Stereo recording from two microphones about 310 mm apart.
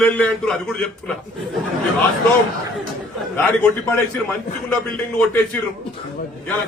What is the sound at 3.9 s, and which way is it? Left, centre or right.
A man's voice, centre.